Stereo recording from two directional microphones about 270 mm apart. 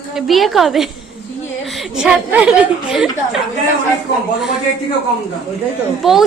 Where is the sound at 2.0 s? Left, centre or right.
Centre.